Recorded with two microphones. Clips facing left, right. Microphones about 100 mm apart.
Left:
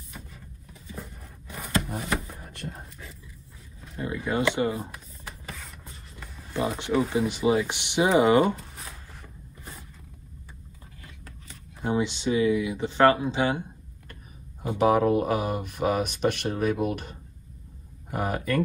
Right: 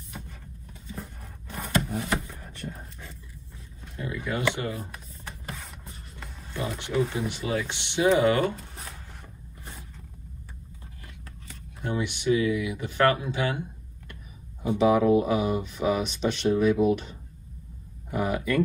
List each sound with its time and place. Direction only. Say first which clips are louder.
0.9 s a sound: even; centre (ahead or behind)
4.0 s speech: left 2 dB; 25° left (ahead or behind)
5.2 s a sound: right 2 dB; centre (ahead or behind)
6.6 s speech: left 2 dB; 25° left (ahead or behind)
11.4 s speech: left 4 dB; 20° left (ahead or behind)
14.8 s speech: right 1 dB; 50° left (ahead or behind)